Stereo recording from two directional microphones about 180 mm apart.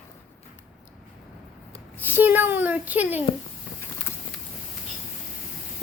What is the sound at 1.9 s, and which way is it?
A child's voice, 10° right (ahead or behind).